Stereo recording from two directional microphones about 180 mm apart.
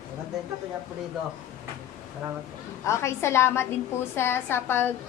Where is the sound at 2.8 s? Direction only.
15° left (ahead or behind).